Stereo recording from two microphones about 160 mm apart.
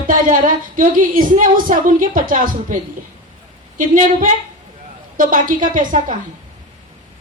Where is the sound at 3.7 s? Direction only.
55° right (ahead or behind).